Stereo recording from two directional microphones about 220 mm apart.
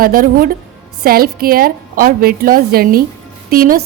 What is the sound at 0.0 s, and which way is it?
A woman's voice, 40° right (ahead or behind).